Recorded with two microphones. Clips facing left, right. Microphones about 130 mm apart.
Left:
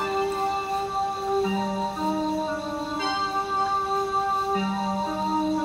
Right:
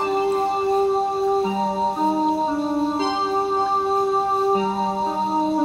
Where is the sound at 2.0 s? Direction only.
25° right (ahead or behind).